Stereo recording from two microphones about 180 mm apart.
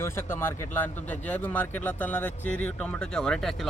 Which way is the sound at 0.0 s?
10° left (ahead or behind).